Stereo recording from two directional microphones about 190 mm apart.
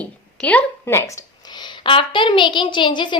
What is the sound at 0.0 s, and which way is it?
A woman's voice, 5° left (ahead or behind).